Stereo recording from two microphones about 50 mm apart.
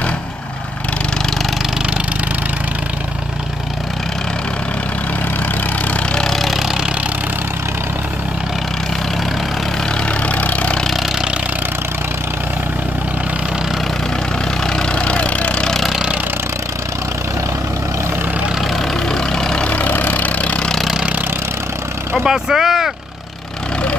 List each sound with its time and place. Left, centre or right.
6.1 s a sound: centre
10.2 s vehicle: left
14.7 s engine: centre
19.0 s vehicle: centre
19.7 s vehicle: left
22.2 s vehicle: centre